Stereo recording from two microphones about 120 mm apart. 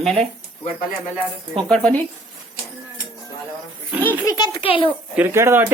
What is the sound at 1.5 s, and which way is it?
Speech, 5° left (ahead or behind).